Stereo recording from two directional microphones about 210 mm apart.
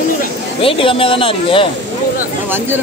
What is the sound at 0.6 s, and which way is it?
Speech, 25° left (ahead or behind).